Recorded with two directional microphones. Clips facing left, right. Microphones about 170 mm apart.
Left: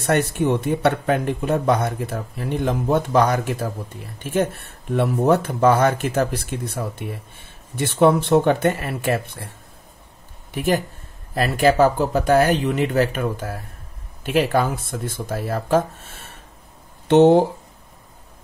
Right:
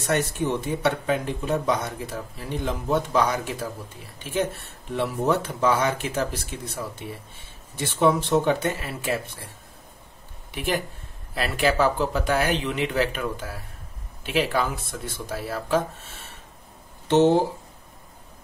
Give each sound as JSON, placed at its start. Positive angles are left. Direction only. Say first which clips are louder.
{"t": 0.0, "sound": "speech", "louder": "left 5 dB", "side_deg": 60}
{"t": 10.5, "sound": "speech", "louder": "left 6 dB", "side_deg": 45}
{"t": 17.1, "sound": "speech", "louder": "left 5 dB", "side_deg": 60}